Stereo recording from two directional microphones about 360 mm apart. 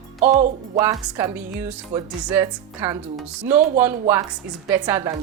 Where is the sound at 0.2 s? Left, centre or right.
Right.